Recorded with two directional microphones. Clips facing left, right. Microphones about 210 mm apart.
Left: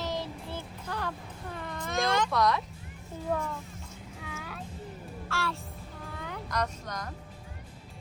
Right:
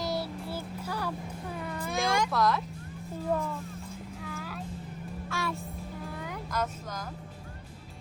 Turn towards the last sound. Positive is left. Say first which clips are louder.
# even
turn(degrees=-5)  # may be behind; listen again after turning